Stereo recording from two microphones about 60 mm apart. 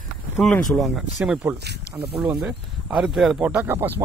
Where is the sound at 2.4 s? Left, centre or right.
Centre.